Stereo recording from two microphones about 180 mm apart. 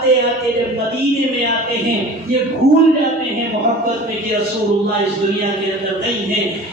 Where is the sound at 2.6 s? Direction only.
65° right (ahead or behind).